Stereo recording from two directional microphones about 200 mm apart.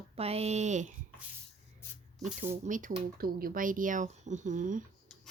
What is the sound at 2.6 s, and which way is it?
Speech, 40° right (ahead or behind).